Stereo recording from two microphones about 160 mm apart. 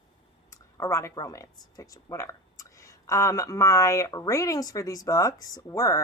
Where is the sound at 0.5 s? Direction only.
15° left (ahead or behind).